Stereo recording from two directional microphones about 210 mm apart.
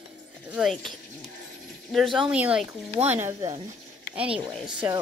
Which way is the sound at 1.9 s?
Centre (ahead or behind).